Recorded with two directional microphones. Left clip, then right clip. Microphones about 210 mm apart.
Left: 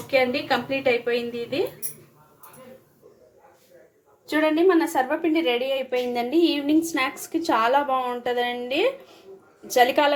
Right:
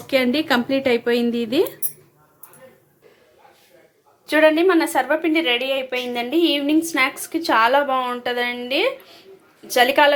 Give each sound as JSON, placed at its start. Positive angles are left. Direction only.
{"t": 0.1, "sound": "a woman's voice", "side_deg": -50}
{"t": 4.3, "sound": "a woman's voice", "side_deg": 0}